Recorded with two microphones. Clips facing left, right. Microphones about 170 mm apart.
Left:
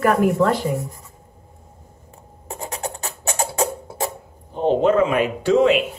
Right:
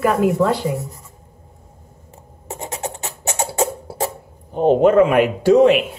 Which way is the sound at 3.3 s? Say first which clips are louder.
Right 2 dB; 25° right (ahead or behind).